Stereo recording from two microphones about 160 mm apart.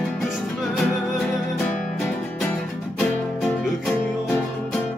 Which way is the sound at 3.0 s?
10° left (ahead or behind).